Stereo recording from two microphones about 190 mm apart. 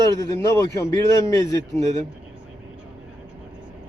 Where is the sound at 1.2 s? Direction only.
15° left (ahead or behind).